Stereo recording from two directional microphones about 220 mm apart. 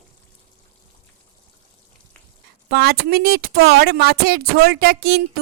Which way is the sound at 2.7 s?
45° right (ahead or behind).